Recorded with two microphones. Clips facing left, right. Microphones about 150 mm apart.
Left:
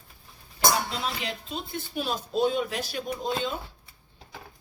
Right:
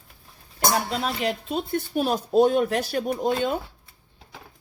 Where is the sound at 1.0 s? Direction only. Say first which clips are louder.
Right 6 dB; 55° right (ahead or behind).